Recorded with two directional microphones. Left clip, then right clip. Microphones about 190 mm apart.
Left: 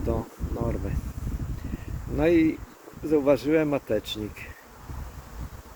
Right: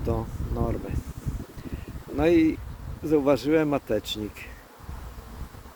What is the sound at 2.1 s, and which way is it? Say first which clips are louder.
Speech: right 1 dB; 15° right (ahead or behind).